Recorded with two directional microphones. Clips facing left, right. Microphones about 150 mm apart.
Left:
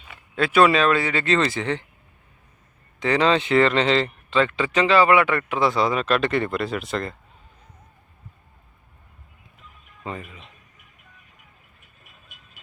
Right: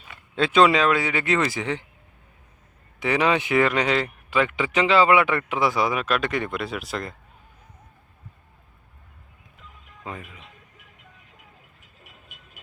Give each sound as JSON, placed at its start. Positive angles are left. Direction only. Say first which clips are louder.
{"t": 0.3, "sound": "speech", "louder": "left 1 dB", "side_deg": -20}
{"t": 3.0, "sound": "speech", "louder": "left 2 dB", "side_deg": -10}
{"t": 10.0, "sound": "speech", "louder": "left 3 dB", "side_deg": 0}
{"t": 11.8, "sound": "vehicle", "louder": "right 3 dB", "side_deg": -80}